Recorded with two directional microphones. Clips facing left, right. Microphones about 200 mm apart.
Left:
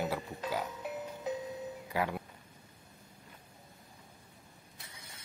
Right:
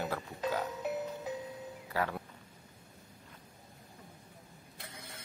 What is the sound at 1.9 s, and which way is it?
Speech, 15° left (ahead or behind).